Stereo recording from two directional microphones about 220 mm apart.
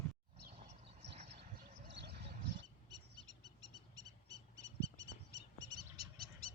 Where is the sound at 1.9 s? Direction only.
50° right (ahead or behind).